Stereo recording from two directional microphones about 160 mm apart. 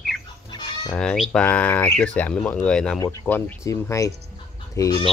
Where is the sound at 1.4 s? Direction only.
10° left (ahead or behind).